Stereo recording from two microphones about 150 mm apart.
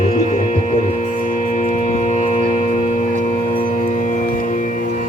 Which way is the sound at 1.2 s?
60° left (ahead or behind).